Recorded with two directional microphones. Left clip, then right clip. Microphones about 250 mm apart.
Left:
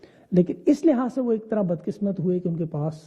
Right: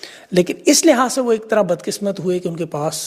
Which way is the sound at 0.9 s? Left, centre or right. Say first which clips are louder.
Right 9 dB; centre.